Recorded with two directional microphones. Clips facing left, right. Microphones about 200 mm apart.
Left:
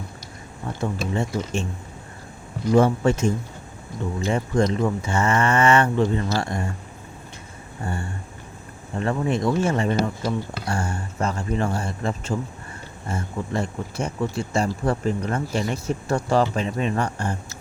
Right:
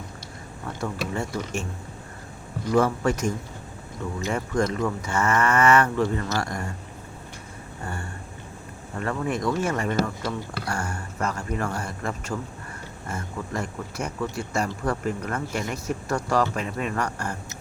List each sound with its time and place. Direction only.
0.8 s speech: 20° left (ahead or behind)
2.7 s speech: 25° left (ahead or behind)
7.9 s speech: 25° left (ahead or behind)